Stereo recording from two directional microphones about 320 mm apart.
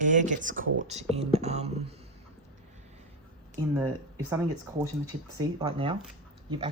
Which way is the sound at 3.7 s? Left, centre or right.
Centre.